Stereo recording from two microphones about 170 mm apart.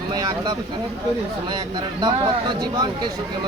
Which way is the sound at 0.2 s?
20° right (ahead or behind).